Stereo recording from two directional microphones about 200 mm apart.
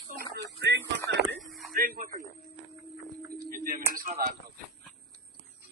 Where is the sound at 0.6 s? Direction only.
60° right (ahead or behind).